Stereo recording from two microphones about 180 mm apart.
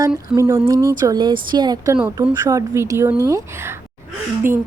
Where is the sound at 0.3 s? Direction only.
15° right (ahead or behind).